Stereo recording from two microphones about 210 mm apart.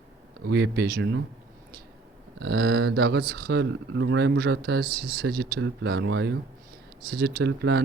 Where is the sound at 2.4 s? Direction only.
50° right (ahead or behind).